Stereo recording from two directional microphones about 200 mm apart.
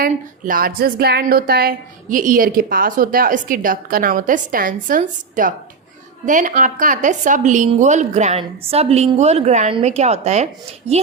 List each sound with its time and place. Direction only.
0.0 s a woman's voice: 45° right (ahead or behind)